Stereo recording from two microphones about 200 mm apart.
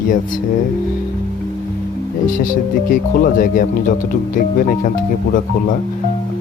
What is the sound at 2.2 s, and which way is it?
Speech, 40° left (ahead or behind).